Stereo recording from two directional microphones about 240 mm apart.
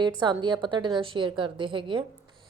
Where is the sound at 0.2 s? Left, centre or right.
Centre.